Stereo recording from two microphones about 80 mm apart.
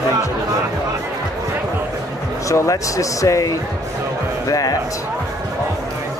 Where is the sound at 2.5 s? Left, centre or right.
Left.